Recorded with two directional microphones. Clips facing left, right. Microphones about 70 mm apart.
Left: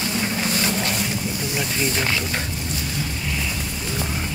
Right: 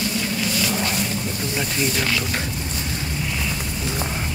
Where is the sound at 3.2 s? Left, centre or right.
Centre.